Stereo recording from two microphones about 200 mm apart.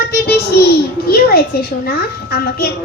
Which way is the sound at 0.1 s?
50° left (ahead or behind).